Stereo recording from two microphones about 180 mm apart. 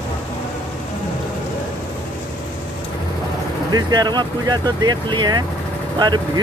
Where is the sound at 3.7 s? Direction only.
20° right (ahead or behind).